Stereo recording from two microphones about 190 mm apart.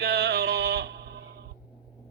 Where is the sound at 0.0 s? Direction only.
60° right (ahead or behind).